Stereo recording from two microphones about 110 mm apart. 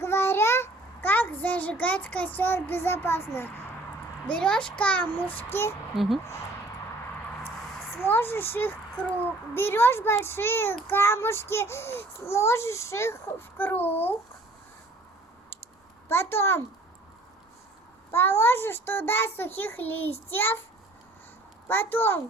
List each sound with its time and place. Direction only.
0.0 s child singing: 20° left (ahead or behind)
4.3 s child singing: 10° left (ahead or behind)
7.9 s a child's voice: 20° left (ahead or behind)
13.6 s child singing: 15° left (ahead or behind)
16.0 s a child's voice: 20° left (ahead or behind)
18.1 s a child's voice: 20° left (ahead or behind)
21.7 s a child's voice: 20° left (ahead or behind)